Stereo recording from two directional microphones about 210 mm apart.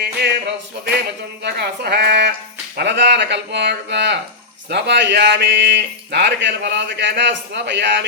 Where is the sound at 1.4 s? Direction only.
50° right (ahead or behind).